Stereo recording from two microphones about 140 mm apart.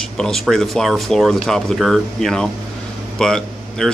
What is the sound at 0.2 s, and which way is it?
Speech, 5° left (ahead or behind).